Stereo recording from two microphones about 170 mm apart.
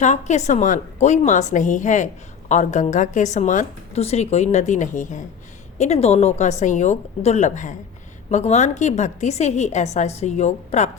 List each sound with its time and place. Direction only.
0.0 s a woman's voice: 45° left (ahead or behind)